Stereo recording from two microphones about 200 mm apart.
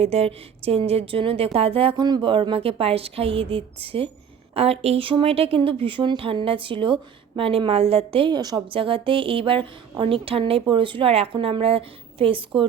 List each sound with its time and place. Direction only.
0.0 s a woman's voice: 30° right (ahead or behind)